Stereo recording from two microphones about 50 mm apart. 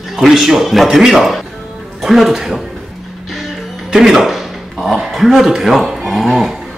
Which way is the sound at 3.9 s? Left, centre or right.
Centre.